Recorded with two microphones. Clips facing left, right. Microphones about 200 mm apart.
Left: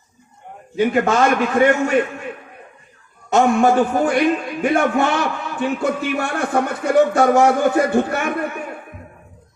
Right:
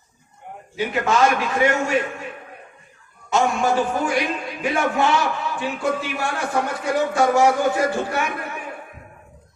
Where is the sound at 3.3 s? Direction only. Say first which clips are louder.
Left 5 dB; 55° left (ahead or behind).